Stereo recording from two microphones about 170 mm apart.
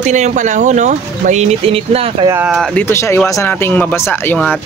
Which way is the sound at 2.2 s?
15° right (ahead or behind).